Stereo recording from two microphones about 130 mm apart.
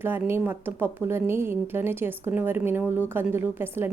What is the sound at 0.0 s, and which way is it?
A woman's voice, 15° right (ahead or behind).